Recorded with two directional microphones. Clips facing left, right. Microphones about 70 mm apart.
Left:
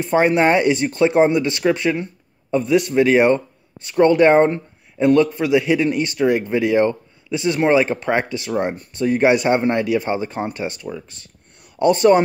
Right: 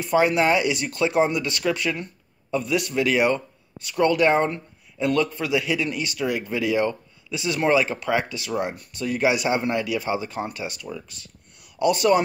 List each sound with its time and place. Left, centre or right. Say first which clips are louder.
0.0 s speech: left 4 dB; left
9.2 s speech: left 5 dB; left